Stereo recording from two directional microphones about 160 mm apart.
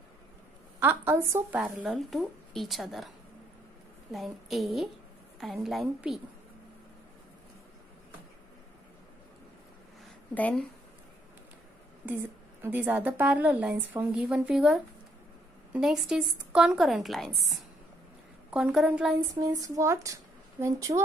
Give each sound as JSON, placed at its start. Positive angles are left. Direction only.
{"t": 0.7, "sound": "speech", "side_deg": -15}
{"t": 1.6, "sound": "a woman's voice", "side_deg": -5}
{"t": 4.1, "sound": "a woman's voice", "side_deg": 0}
{"t": 10.3, "sound": "speech", "side_deg": 10}
{"t": 12.6, "sound": "a woman's voice", "side_deg": -10}
{"t": 19.4, "sound": "speech", "side_deg": -20}